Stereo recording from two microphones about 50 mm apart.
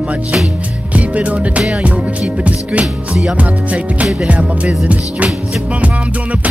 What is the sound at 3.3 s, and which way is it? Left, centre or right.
Music, right.